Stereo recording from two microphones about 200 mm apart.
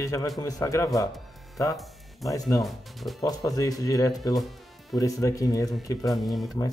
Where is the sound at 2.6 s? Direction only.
Centre (ahead or behind).